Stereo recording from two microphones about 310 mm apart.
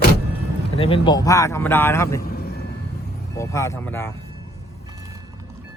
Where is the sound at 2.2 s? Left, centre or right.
Left.